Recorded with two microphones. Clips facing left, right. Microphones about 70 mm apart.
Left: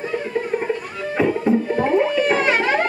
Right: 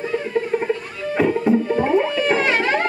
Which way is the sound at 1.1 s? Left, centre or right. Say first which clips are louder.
Right 1 dB; centre.